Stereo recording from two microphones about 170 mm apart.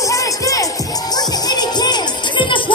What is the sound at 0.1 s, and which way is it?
Music, 20° left (ahead or behind).